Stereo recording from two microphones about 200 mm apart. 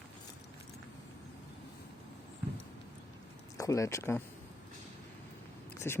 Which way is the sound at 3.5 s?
15° left (ahead or behind).